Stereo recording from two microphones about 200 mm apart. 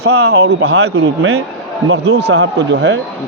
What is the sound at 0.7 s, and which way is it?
Speech, 90° right.